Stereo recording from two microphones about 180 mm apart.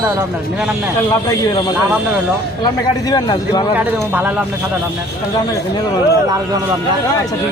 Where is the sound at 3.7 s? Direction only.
10° right (ahead or behind).